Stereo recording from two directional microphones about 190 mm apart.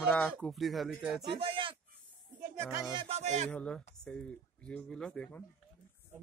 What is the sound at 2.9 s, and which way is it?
Speech, 30° right (ahead or behind).